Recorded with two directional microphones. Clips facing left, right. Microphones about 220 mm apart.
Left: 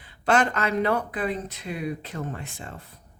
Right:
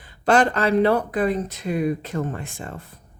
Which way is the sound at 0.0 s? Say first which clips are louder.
Right 4 dB; 35° right (ahead or behind).